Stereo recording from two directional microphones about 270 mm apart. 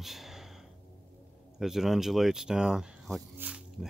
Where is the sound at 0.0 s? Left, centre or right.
Centre.